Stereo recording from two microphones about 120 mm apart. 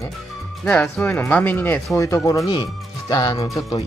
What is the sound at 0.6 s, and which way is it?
Speech, 5° left (ahead or behind).